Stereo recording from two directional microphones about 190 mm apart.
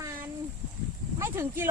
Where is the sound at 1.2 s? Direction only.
15° right (ahead or behind).